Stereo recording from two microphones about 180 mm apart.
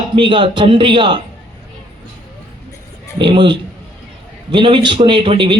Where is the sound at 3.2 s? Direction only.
25° right (ahead or behind).